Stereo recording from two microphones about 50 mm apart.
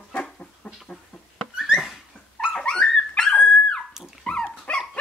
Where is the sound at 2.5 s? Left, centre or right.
Centre.